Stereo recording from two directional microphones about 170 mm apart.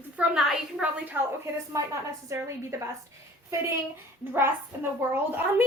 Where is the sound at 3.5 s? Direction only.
15° right (ahead or behind).